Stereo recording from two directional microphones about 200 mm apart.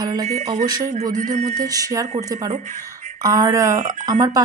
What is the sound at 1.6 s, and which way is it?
Speech, 15° right (ahead or behind).